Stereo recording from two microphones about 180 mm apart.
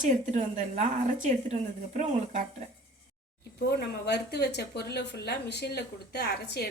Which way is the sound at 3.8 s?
65° left (ahead or behind).